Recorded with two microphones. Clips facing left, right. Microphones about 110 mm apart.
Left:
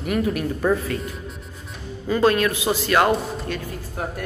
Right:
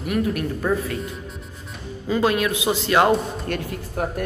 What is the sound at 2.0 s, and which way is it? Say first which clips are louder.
A man's voice: left 2 dB; 10° right (ahead or behind).